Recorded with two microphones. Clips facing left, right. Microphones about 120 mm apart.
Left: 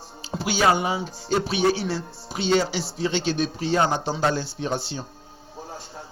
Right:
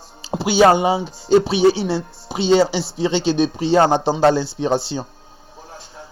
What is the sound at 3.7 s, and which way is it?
Speech, 75° right (ahead or behind).